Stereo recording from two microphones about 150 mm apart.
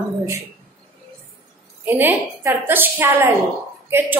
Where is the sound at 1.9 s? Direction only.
15° right (ahead or behind).